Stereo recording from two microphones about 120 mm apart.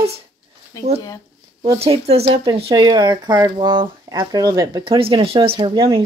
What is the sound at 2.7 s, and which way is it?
Speech, 35° right (ahead or behind).